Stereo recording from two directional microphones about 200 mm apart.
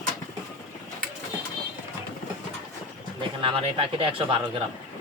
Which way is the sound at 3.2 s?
25° right (ahead or behind).